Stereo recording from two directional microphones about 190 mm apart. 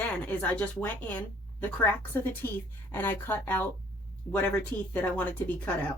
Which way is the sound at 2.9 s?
10° left (ahead or behind).